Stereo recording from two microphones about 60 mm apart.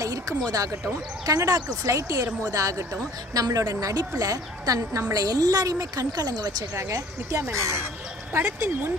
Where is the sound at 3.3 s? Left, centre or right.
Right.